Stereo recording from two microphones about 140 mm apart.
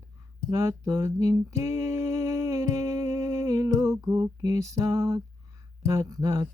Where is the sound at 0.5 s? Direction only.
25° right (ahead or behind).